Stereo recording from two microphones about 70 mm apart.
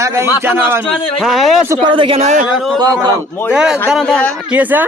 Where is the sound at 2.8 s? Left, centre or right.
Right.